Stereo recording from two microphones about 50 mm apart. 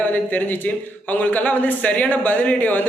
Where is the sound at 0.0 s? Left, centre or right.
Left.